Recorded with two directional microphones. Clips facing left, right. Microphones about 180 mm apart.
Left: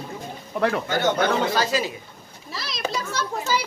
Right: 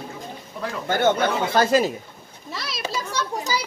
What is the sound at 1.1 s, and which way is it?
Speech, 55° left (ahead or behind).